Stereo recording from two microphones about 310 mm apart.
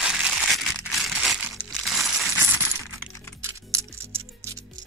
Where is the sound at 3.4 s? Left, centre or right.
Centre.